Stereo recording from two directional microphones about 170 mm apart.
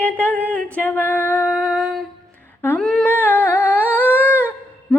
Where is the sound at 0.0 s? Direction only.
10° left (ahead or behind).